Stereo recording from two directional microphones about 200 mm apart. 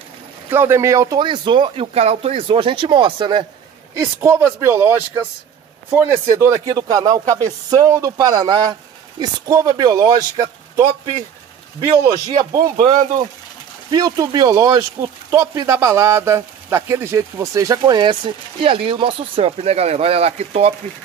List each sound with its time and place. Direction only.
0.5 s speech: 10° right (ahead or behind)
4.0 s a man's voice: 10° right (ahead or behind)
12.4 s speech: 20° right (ahead or behind)
13.8 s speech: 20° right (ahead or behind)